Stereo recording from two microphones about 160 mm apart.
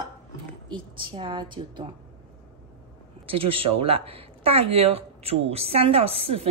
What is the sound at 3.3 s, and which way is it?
Speech, 35° right (ahead or behind).